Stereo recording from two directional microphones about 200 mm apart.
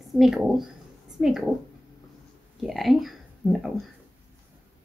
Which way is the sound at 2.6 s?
Centre (ahead or behind).